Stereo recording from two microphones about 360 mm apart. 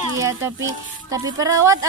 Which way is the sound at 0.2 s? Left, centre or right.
Centre.